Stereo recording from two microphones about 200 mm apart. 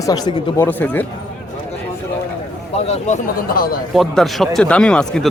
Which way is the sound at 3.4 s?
45° left (ahead or behind).